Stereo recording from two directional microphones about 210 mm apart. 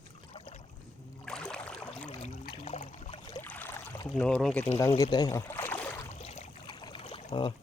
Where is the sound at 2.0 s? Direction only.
30° left (ahead or behind).